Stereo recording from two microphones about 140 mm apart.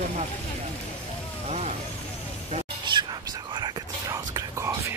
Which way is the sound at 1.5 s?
50° right (ahead or behind).